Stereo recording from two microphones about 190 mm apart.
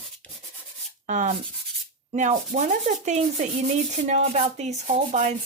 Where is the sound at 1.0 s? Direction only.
40° right (ahead or behind).